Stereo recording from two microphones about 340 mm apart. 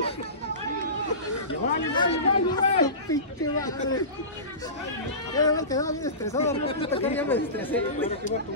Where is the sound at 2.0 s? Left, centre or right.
Centre.